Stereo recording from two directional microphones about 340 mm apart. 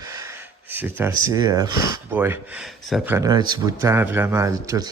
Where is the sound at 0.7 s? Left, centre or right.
Centre.